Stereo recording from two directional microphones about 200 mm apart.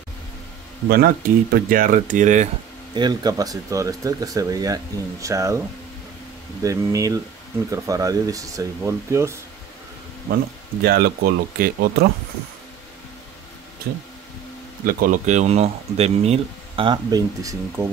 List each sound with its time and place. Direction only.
0.8 s speech: 50° right (ahead or behind)
2.9 s speech: 20° right (ahead or behind)
6.6 s speech: 15° right (ahead or behind)
10.8 s speech: 50° right (ahead or behind)
14.9 s speech: 45° right (ahead or behind); by 17.8 s 15° right (ahead or behind)